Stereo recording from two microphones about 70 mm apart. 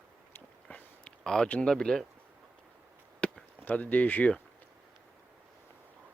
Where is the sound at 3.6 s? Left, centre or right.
Left.